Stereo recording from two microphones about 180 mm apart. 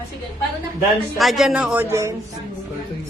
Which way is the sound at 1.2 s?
Centre (ahead or behind).